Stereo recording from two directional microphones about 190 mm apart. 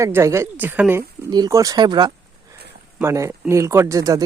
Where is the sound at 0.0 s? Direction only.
15° right (ahead or behind).